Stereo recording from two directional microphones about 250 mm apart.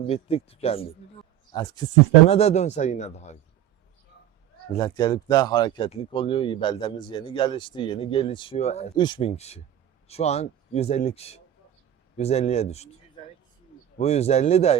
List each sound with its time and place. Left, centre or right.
0.1 s speech: left
4.7 s speech: centre
14.0 s speech: left